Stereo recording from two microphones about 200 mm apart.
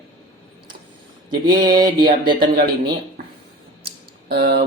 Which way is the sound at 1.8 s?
20° right (ahead or behind).